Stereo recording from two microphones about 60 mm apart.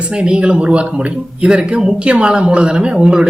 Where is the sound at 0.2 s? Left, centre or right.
Centre.